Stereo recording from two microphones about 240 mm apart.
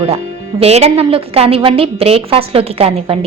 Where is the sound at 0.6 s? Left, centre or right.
Right.